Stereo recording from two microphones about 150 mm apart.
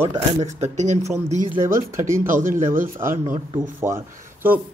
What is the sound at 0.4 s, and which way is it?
Speech, 50° right (ahead or behind).